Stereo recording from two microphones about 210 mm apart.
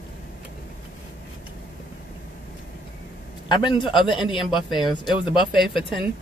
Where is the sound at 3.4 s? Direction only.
20° left (ahead or behind).